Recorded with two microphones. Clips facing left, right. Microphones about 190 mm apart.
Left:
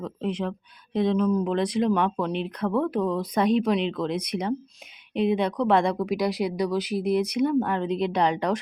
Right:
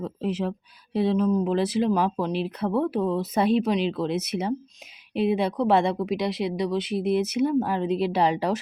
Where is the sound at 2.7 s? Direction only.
30° right (ahead or behind).